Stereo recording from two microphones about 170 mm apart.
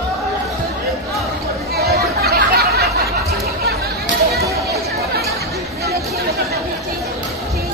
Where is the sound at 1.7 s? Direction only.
65° right (ahead or behind).